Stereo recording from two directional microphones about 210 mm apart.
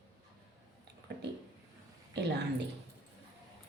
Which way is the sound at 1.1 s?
55° right (ahead or behind).